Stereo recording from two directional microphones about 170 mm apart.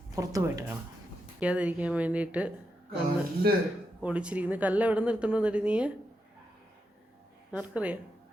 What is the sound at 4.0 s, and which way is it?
A woman's voice, 5° right (ahead or behind).